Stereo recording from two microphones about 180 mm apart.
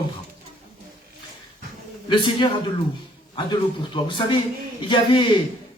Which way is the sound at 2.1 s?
25° left (ahead or behind).